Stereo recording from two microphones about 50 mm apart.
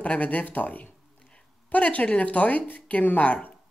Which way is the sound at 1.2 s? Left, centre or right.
Centre.